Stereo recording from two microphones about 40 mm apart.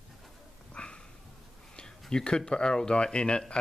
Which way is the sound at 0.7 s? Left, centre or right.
Left.